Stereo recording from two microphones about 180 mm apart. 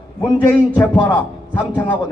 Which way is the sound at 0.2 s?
15° left (ahead or behind).